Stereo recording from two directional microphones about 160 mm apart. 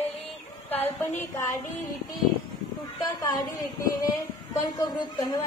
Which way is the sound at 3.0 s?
20° left (ahead or behind).